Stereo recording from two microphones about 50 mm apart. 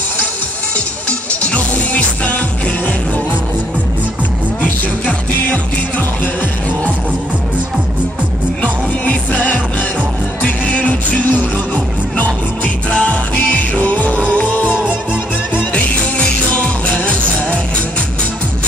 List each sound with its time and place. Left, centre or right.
1.4 s music: left
4.6 s music: left
8.6 s music: left